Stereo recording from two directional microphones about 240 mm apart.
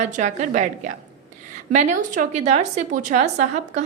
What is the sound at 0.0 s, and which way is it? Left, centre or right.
A woman's voice, right.